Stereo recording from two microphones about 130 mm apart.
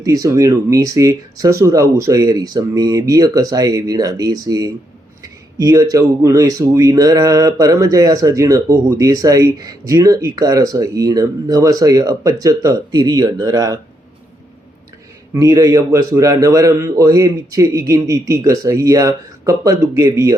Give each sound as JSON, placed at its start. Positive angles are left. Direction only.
{"t": 0.0, "sound": "speech", "side_deg": -25}
{"t": 15.3, "sound": "speech", "side_deg": -25}